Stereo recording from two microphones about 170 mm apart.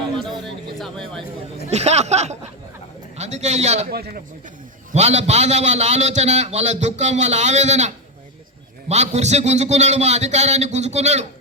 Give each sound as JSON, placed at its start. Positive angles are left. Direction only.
{"t": 0.2, "sound": "a sound", "side_deg": 0}
{"t": 1.7, "sound": "a man's voice", "side_deg": -40}
{"t": 3.8, "sound": "speech", "side_deg": -65}
{"t": 4.9, "sound": "a man's voice", "side_deg": -40}